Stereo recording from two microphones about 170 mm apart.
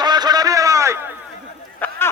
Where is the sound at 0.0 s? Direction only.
25° right (ahead or behind).